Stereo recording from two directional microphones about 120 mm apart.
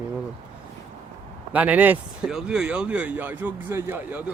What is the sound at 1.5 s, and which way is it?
Speech, 10° right (ahead or behind).